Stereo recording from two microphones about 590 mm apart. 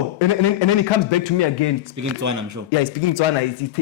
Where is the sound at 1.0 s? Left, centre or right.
Left.